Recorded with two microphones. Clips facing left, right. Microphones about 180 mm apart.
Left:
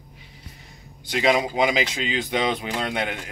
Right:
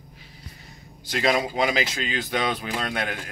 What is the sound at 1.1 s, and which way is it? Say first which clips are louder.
Speech: left 2 dB; 15° left (ahead or behind).